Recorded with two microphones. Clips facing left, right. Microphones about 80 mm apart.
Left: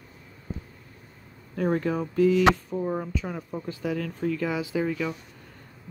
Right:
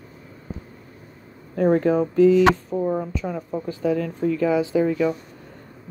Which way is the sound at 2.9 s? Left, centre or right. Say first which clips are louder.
Right 5 dB; centre.